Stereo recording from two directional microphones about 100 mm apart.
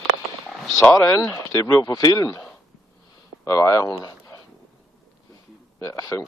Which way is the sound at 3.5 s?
35° left (ahead or behind).